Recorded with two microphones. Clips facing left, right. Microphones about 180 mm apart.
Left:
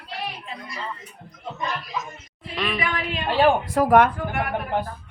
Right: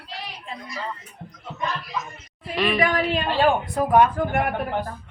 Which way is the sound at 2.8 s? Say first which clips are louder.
Right 6 dB; 40° right (ahead or behind).